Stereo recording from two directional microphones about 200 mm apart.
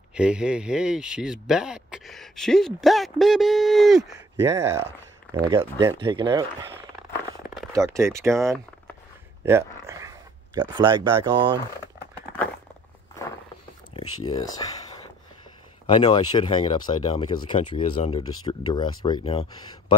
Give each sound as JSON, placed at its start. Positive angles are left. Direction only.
{"t": 0.1, "sound": "speech", "side_deg": -5}
{"t": 4.4, "sound": "speech", "side_deg": -15}
{"t": 7.7, "sound": "speech", "side_deg": -15}
{"t": 9.4, "sound": "a sound", "side_deg": -15}
{"t": 11.2, "sound": "speech", "side_deg": -25}
{"t": 14.0, "sound": "speech", "side_deg": 90}
{"t": 14.3, "sound": "speech", "side_deg": 20}
{"t": 15.9, "sound": "speech", "side_deg": 20}